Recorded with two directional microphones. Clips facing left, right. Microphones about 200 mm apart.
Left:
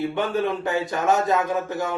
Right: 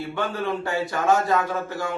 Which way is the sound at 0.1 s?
20° left (ahead or behind).